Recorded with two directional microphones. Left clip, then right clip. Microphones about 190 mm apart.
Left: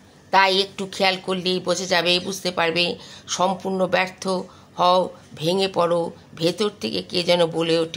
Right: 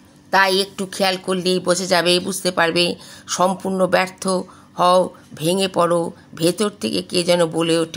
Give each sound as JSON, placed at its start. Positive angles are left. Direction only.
{"t": 0.3, "sound": "a woman's voice", "side_deg": -15}